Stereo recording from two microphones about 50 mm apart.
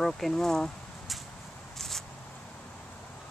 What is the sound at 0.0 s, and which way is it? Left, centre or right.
Speech, centre.